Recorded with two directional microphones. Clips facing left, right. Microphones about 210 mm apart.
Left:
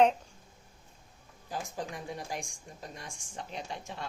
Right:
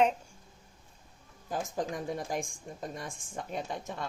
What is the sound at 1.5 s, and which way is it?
A woman's voice, 45° right (ahead or behind).